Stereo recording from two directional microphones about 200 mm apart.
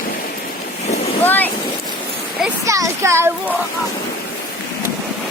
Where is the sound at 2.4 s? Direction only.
15° right (ahead or behind).